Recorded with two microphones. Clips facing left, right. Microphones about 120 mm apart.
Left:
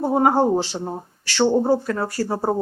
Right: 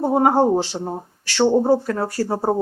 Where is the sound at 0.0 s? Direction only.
15° right (ahead or behind).